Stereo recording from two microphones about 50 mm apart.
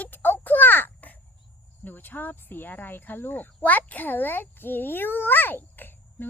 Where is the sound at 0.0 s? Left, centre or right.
Left.